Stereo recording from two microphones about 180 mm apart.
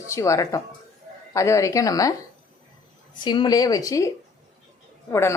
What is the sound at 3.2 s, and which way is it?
Speech, 25° left (ahead or behind).